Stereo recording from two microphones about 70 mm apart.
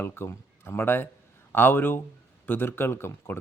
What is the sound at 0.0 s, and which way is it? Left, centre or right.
Speech, left.